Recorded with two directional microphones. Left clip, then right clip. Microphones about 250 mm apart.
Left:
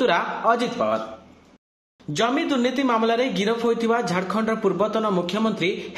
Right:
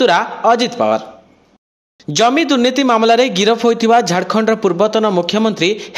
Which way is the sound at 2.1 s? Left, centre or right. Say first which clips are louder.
Right 10 dB; right.